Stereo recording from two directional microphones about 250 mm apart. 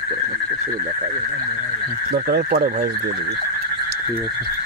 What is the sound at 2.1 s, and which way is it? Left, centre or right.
Speech, right.